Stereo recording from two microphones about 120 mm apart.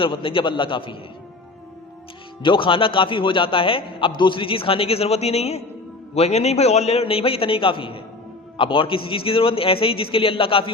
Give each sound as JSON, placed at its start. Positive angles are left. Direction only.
{"t": 0.0, "sound": "a man's voice", "side_deg": 45}
{"t": 2.4, "sound": "a man's voice", "side_deg": 45}